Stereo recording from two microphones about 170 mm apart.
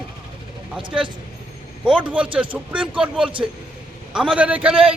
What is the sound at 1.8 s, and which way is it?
Speech, 10° right (ahead or behind).